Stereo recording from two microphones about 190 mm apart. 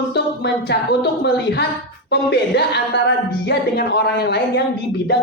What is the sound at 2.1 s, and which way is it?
Speech, 60° left (ahead or behind).